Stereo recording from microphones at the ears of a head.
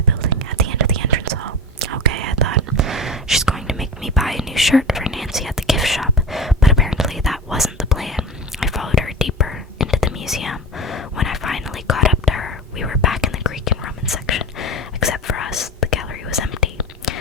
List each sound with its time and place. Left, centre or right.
0.0 s whispering: right
3.2 s whispering: centre
8.9 s whispering: left